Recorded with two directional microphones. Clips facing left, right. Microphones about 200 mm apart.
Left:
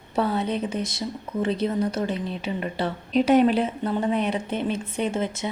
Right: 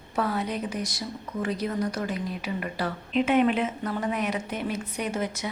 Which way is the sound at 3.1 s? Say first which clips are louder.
Left 4 dB; 40° left (ahead or behind).